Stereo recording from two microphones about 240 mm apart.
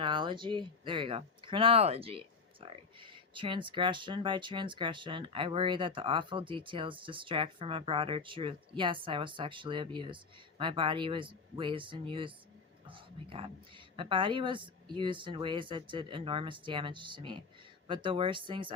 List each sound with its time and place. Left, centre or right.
0.0 s a woman's voice: centre